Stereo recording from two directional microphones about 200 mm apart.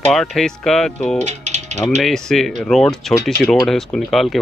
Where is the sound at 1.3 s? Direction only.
35° right (ahead or behind).